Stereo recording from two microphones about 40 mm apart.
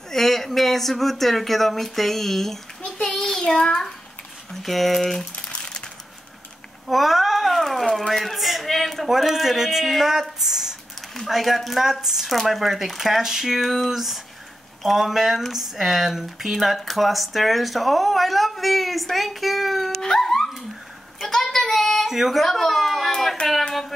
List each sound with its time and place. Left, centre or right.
0.1 s speech: centre
3.2 s child singing: centre
4.5 s speech: centre
5.5 s a sound: left
6.9 s speech: centre
10.4 s a sound: centre
11.2 s speech: centre
20.0 s dog: centre
21.3 s child singing: centre
22.0 s speech: centre
22.4 s a sound: centre